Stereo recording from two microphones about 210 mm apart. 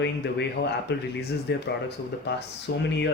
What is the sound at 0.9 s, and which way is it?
Speech, 50° left (ahead or behind).